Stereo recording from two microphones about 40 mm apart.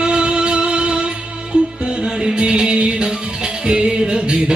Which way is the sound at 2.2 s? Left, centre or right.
Right.